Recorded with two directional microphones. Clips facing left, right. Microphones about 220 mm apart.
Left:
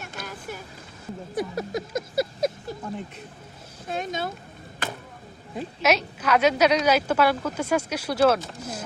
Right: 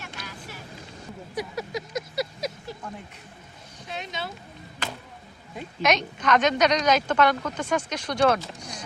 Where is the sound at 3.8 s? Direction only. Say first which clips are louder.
Left 6 dB; 50° left (ahead or behind).